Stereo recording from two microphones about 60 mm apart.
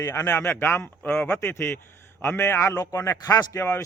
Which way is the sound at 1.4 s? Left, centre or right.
Left.